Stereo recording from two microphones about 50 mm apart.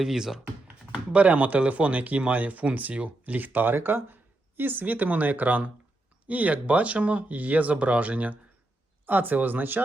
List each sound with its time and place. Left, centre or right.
0.0 s speech: centre
1.1 s speech: right